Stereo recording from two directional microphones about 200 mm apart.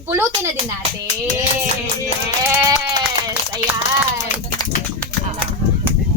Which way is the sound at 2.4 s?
15° right (ahead or behind).